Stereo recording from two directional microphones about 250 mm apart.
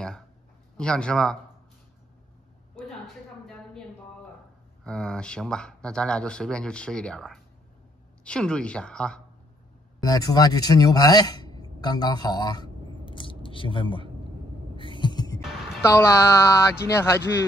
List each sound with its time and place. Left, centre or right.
0.7 s speech: centre
4.8 s speech: centre
10.0 s speech: centre
13.0 s a sound: centre
15.8 s speech: centre